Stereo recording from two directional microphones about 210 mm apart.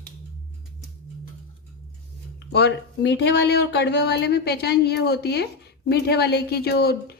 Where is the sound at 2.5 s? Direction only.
55° left (ahead or behind).